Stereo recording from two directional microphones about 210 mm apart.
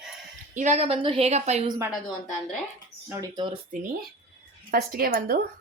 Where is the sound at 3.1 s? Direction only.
20° right (ahead or behind).